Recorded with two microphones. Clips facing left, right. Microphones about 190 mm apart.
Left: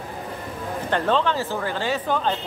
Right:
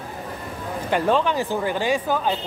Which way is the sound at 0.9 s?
10° right (ahead or behind).